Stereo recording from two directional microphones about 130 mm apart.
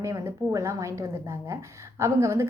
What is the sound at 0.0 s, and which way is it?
A woman's voice, 25° right (ahead or behind).